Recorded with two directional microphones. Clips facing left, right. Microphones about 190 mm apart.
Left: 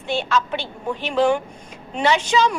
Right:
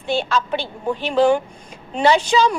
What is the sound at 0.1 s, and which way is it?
A woman's voice, 35° right (ahead or behind).